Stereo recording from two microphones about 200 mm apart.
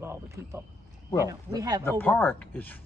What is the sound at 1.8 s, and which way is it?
Speech, 10° left (ahead or behind).